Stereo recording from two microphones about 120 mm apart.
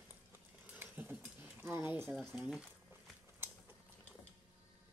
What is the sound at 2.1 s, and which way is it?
Speech, 5° right (ahead or behind).